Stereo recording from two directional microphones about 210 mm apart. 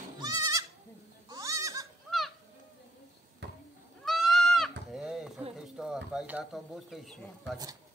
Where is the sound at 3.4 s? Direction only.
55° right (ahead or behind).